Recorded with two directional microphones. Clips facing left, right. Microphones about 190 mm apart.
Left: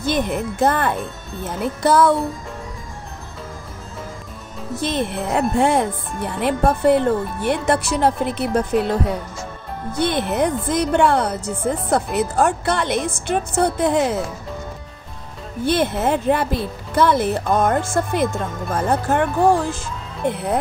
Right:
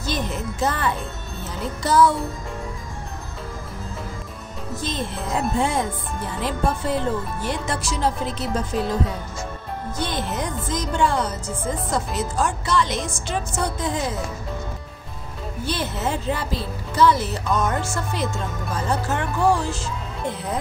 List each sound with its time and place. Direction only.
0.0 s speech: 55° left (ahead or behind)
4.7 s speech: 65° left (ahead or behind)
15.6 s speech: 55° left (ahead or behind)